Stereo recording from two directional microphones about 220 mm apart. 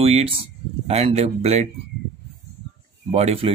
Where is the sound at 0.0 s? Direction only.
25° right (ahead or behind).